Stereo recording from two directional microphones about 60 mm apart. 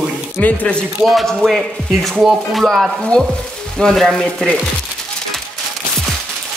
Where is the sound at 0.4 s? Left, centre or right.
Left.